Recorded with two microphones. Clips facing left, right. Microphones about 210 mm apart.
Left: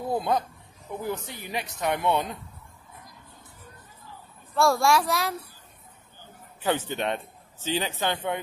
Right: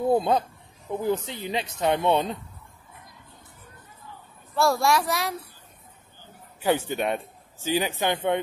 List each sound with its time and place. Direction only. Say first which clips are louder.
0.1 s speech: right 2 dB; 25° right (ahead or behind)
4.6 s a child's voice: even; centre (ahead or behind)
6.6 s a man's voice: right 3 dB; 10° right (ahead or behind)